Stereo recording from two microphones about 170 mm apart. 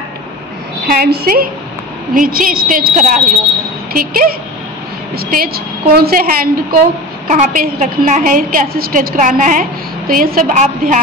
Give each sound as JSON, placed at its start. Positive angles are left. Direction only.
{"t": 0.8, "sound": "a woman's voice", "side_deg": -65}
{"t": 7.2, "sound": "a woman's voice", "side_deg": -45}